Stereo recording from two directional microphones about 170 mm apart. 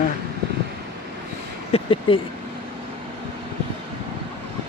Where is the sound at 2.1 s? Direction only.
30° left (ahead or behind).